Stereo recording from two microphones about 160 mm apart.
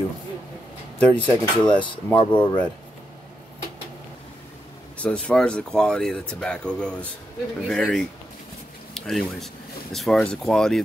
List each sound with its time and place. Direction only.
0.9 s speech: 10° left (ahead or behind)
2.1 s speech: 30° left (ahead or behind)
4.9 s speech: 10° left (ahead or behind)